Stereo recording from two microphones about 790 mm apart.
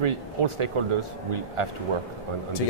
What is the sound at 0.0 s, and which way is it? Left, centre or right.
Speech, right.